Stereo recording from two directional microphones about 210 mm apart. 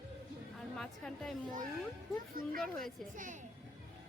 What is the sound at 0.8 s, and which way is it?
Speech, centre (ahead or behind).